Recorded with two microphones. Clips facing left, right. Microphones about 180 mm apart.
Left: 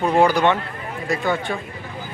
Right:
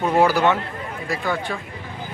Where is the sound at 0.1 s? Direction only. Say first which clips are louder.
Even; 5° right (ahead or behind).